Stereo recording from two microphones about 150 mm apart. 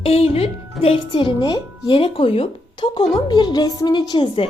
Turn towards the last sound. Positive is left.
turn(degrees=30)  # may be behind; listen again after turning